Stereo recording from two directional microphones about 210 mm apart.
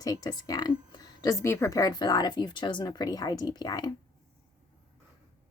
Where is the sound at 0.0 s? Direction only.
15° left (ahead or behind).